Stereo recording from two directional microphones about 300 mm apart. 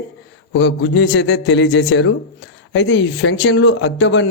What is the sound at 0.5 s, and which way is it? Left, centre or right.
A man's voice, left.